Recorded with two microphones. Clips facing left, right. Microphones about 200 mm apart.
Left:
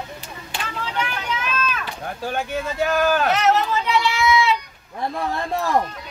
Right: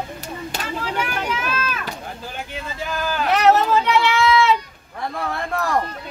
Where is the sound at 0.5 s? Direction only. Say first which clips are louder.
Left 2 dB; 40° right (ahead or behind).